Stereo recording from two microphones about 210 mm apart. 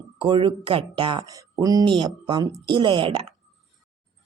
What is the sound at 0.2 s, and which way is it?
Speech, 25° right (ahead or behind).